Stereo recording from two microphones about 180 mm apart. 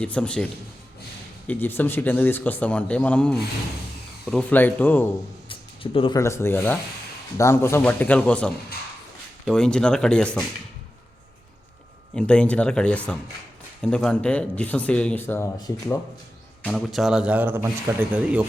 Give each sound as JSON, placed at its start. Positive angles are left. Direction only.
{"t": 0.0, "sound": "speech", "side_deg": 5}
{"t": 1.5, "sound": "speech", "side_deg": 10}
{"t": 5.5, "sound": "a sound", "side_deg": 30}
{"t": 6.1, "sound": "speech", "side_deg": 15}
{"t": 12.1, "sound": "speech", "side_deg": 5}
{"t": 16.6, "sound": "a man's voice", "side_deg": 0}